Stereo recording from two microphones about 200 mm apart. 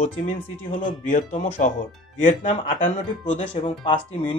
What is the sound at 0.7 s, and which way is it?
A man's voice, 30° left (ahead or behind).